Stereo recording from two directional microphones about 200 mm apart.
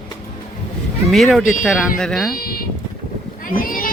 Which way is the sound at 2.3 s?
50° left (ahead or behind).